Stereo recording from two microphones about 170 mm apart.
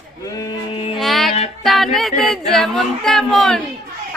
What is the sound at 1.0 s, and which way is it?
Female singing, centre (ahead or behind).